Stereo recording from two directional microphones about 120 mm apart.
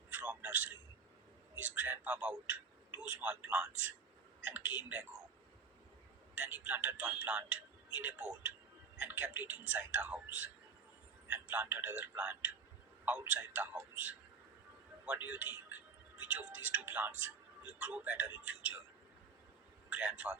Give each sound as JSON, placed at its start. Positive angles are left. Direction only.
{"t": 0.1, "sound": "telephone", "side_deg": -15}
{"t": 1.5, "sound": "a man's voice", "side_deg": -15}
{"t": 6.3, "sound": "a man's voice", "side_deg": -15}
{"t": 19.9, "sound": "a man's voice", "side_deg": -10}